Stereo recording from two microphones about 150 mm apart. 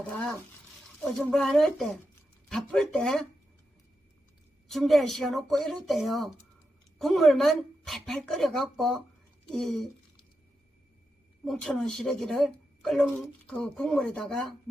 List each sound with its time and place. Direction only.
0.1 s speech: 5° left (ahead or behind)
4.7 s speech: centre (ahead or behind)
11.4 s speech: centre (ahead or behind)